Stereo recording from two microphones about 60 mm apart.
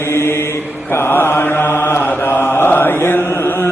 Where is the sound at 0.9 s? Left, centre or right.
Left.